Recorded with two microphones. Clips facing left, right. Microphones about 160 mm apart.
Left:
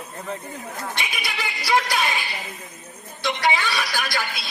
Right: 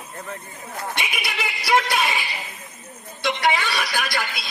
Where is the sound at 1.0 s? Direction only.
Centre (ahead or behind).